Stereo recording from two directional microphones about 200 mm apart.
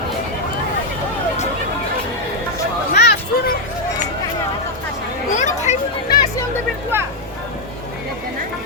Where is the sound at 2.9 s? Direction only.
50° left (ahead or behind).